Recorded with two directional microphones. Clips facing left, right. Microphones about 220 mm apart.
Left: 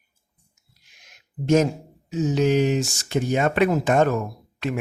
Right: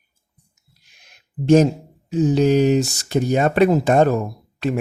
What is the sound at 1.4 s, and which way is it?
Speech, 30° right (ahead or behind).